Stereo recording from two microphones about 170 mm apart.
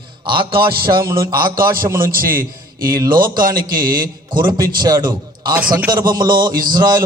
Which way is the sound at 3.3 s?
55° right (ahead or behind).